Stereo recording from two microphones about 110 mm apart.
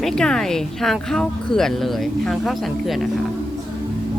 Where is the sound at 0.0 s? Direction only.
5° left (ahead or behind).